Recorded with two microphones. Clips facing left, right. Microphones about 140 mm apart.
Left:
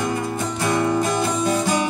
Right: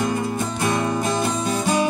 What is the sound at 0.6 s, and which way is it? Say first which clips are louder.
Music: left 3 dB; 20° right (ahead or behind).